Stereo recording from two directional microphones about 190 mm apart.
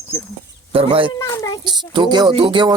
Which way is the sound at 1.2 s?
15° left (ahead or behind).